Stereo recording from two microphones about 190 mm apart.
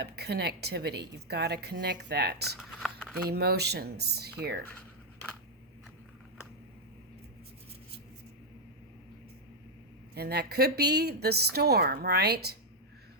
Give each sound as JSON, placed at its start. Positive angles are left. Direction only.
{"t": 0.0, "sound": "a woman's voice", "side_deg": -60}
{"t": 2.6, "sound": "speech", "side_deg": 0}
{"t": 3.2, "sound": "a woman's voice", "side_deg": -55}
{"t": 10.2, "sound": "a woman's voice", "side_deg": -55}